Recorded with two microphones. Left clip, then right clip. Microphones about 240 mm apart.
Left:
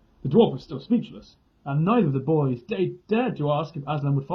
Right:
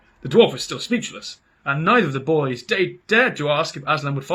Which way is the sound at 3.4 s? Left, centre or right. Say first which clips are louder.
Right 5 dB; right.